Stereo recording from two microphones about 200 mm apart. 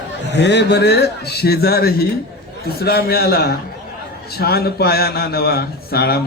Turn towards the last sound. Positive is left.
turn(degrees=50)  # may be behind; listen again after turning